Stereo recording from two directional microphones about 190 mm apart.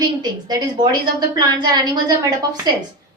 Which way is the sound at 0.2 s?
20° right (ahead or behind).